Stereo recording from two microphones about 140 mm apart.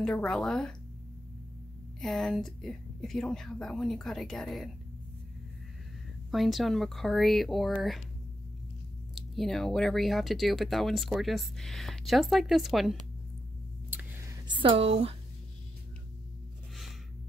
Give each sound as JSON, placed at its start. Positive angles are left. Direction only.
{"t": 0.0, "sound": "speech", "side_deg": 5}
{"t": 2.0, "sound": "speech", "side_deg": 0}
{"t": 6.3, "sound": "speech", "side_deg": 0}
{"t": 9.1, "sound": "speech", "side_deg": 0}
{"t": 14.5, "sound": "speech", "side_deg": -40}